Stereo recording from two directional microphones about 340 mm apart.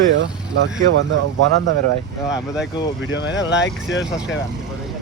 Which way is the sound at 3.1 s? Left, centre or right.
Left.